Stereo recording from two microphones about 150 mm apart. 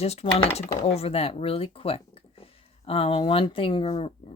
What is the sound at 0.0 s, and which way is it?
A woman's voice, 45° left (ahead or behind).